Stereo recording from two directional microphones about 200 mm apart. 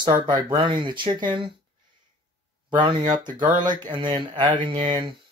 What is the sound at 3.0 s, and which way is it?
Speech, 40° right (ahead or behind).